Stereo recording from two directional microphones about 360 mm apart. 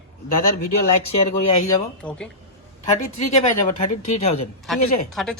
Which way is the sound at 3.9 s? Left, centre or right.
Left.